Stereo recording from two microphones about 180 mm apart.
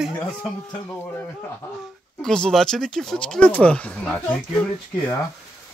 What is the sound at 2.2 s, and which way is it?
Speech, 5° left (ahead or behind).